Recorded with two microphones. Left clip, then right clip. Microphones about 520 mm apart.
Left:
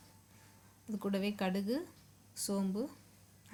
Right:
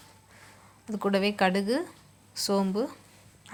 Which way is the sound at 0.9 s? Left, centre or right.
Left.